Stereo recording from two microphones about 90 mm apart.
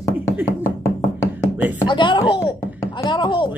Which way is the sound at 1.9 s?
60° left (ahead or behind).